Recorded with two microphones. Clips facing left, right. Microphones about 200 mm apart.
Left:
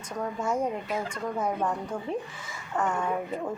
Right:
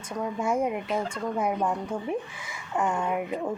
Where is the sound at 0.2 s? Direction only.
10° right (ahead or behind).